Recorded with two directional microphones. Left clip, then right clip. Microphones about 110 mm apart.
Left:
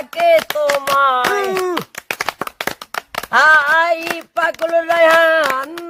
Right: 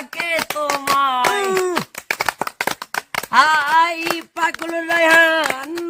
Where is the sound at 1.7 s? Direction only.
35° right (ahead or behind).